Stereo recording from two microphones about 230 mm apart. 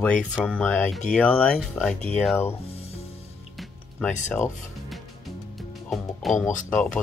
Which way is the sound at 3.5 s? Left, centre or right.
Centre.